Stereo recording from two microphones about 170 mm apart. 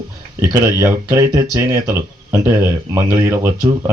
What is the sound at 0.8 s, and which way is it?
Speech, 20° right (ahead or behind).